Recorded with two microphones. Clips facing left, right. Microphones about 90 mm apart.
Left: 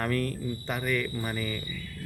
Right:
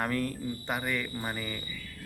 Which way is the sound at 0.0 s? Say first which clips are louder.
Left 2 dB; 20° right (ahead or behind).